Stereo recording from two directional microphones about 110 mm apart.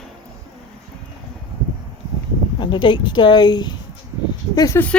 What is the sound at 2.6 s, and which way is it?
Speech, 45° left (ahead or behind).